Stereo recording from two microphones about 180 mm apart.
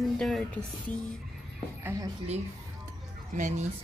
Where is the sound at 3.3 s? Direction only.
45° right (ahead or behind).